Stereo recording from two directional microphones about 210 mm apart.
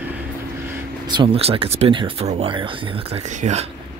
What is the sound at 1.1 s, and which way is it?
Speech, 25° right (ahead or behind).